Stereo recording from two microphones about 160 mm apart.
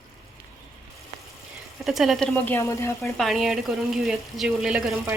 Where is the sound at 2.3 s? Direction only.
15° left (ahead or behind).